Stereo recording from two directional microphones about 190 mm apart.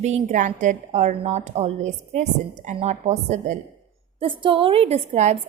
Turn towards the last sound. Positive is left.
turn(degrees=-35)  # may be behind; listen again after turning